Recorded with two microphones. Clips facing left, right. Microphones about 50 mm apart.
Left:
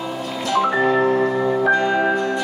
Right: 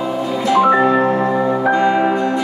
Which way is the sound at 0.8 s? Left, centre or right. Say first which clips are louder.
Right 3 dB; right.